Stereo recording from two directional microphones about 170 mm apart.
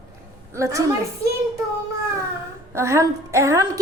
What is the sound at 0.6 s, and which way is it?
Speech, 20° right (ahead or behind).